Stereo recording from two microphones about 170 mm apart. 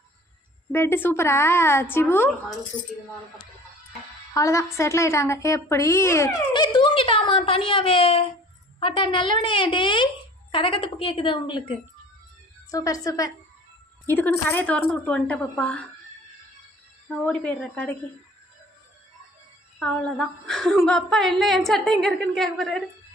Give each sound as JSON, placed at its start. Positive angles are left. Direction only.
{"t": 0.7, "sound": "a woman's voice", "side_deg": 15}
{"t": 4.4, "sound": "a woman's voice", "side_deg": 15}
{"t": 14.1, "sound": "a woman's voice", "side_deg": 10}
{"t": 17.1, "sound": "a woman's voice", "side_deg": 5}
{"t": 19.8, "sound": "a woman's voice", "side_deg": 5}